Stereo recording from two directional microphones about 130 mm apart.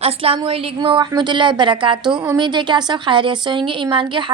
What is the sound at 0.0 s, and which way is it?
A woman's voice, 50° right (ahead or behind).